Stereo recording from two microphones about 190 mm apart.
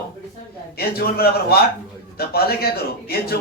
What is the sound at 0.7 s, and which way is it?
A man's voice, 55° left (ahead or behind).